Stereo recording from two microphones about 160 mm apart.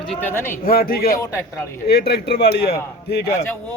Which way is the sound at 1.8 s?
90° left.